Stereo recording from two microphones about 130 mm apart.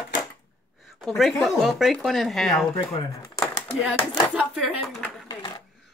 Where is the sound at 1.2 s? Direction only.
Centre (ahead or behind).